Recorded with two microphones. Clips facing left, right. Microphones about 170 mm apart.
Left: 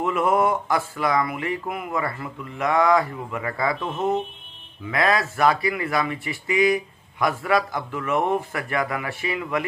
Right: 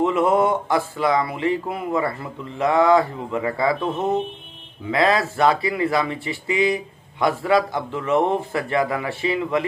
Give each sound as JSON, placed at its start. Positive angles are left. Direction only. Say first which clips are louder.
{"t": 0.0, "sound": "speech", "louder": "right 3 dB", "side_deg": -25}